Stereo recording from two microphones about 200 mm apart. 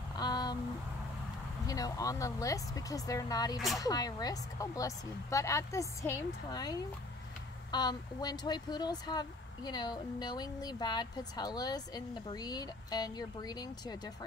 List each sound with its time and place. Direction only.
0.2 s a sound: 20° left (ahead or behind)
1.7 s speech: 15° left (ahead or behind)
3.5 s speech: centre (ahead or behind)
3.8 s speech: 20° left (ahead or behind)